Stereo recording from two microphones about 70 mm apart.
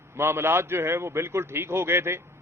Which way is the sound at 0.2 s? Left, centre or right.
Right.